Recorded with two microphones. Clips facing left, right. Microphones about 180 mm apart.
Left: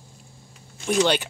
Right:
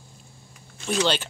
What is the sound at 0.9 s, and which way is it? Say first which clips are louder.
Speech: left 3 dB; 15° left (ahead or behind).